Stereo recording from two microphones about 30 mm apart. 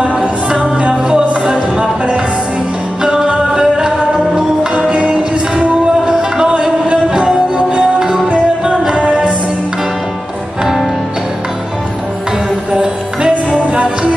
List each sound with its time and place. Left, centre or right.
0.2 s music: centre
4.8 s music: right
6.0 s music: right
12.7 s music: right